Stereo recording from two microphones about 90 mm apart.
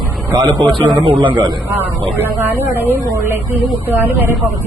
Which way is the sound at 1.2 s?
60° right (ahead or behind).